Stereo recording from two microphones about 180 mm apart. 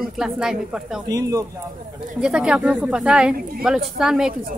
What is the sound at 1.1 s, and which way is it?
Speech, 20° right (ahead or behind).